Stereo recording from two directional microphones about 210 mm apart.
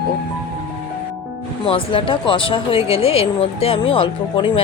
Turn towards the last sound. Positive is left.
turn(degrees=25)  # may be behind; listen again after turning